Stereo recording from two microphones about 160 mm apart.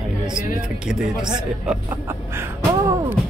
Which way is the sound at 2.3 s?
15° right (ahead or behind).